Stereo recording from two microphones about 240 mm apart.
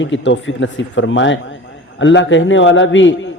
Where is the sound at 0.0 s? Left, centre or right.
Left.